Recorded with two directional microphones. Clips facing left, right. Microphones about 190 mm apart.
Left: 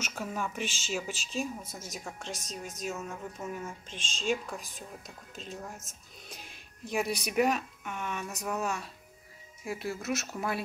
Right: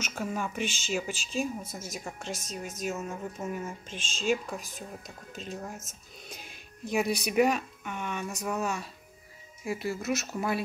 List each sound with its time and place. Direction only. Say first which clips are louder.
0.0 s a woman's voice: right 2 dB; centre (ahead or behind)